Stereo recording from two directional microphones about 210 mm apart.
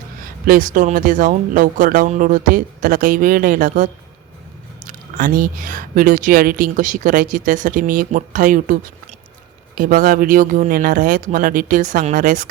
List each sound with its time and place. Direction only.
0.2 s a woman's voice: 40° right (ahead or behind)
4.9 s a woman's voice: 40° right (ahead or behind)